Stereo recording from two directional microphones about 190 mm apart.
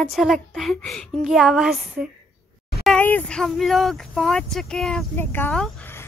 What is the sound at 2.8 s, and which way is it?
Speech, 5° left (ahead or behind).